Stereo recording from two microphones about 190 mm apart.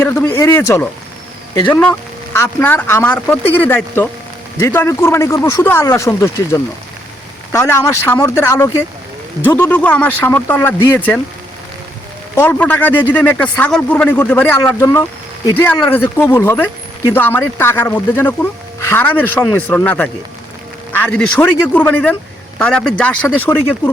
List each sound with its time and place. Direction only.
0.0 s speech: 15° left (ahead or behind)
12.4 s speech: 10° left (ahead or behind)